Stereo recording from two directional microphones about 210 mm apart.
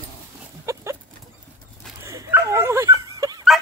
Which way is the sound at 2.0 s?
15° right (ahead or behind).